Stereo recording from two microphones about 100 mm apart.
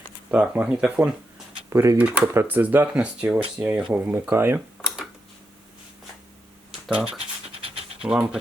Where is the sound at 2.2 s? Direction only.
25° right (ahead or behind).